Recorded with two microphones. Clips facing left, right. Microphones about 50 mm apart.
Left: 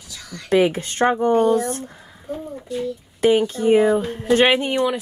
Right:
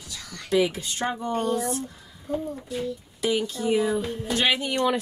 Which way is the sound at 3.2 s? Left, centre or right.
Left.